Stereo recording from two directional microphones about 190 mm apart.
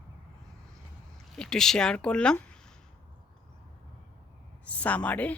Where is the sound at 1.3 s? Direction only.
5° left (ahead or behind).